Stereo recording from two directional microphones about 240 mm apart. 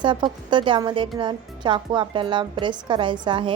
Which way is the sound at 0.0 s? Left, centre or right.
Centre.